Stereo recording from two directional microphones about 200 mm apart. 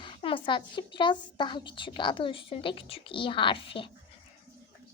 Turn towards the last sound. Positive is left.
turn(degrees=25)  # may be behind; listen again after turning